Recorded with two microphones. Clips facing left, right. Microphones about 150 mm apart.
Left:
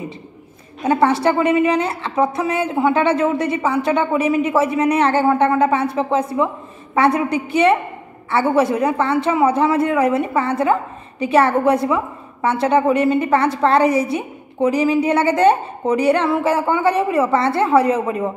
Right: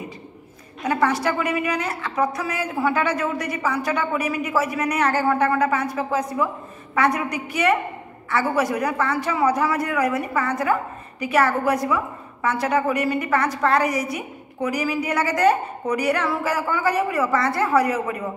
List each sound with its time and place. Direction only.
0.8 s a man's voice: 25° left (ahead or behind)